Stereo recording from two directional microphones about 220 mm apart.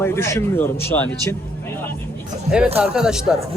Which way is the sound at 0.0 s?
10° left (ahead or behind).